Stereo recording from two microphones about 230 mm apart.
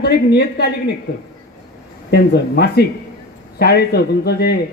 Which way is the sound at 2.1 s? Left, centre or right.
Left.